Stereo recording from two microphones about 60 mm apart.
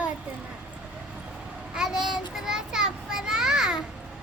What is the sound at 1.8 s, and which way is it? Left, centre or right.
Child singing, centre.